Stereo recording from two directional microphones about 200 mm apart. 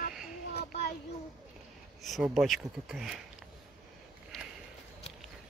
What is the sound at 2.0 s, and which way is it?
Speech, centre (ahead or behind).